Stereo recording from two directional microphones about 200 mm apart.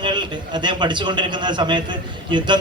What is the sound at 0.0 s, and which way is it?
A man's voice, 20° right (ahead or behind).